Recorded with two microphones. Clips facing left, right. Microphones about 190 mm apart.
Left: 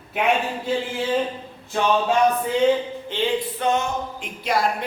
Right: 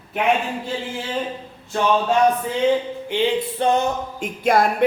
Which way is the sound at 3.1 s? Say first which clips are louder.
Right 4 dB; 15° right (ahead or behind).